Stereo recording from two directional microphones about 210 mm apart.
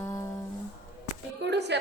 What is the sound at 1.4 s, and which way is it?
Speech, 55° right (ahead or behind).